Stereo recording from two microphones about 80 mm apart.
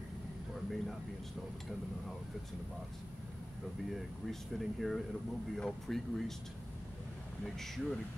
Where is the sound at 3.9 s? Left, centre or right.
Centre.